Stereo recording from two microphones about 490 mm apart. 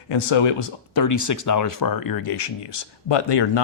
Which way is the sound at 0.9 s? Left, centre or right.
Left.